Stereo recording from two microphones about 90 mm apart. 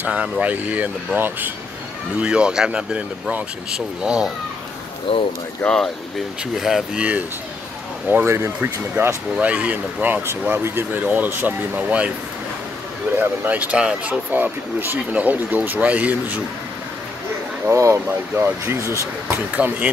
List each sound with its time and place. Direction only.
0.0 s speech: 15° right (ahead or behind)
5.1 s speech: 90° left
6.5 s speech: 5° right (ahead or behind)
13.2 s speech: 20° right (ahead or behind)
17.6 s speech: 30° right (ahead or behind)
19.5 s speech: 15° right (ahead or behind)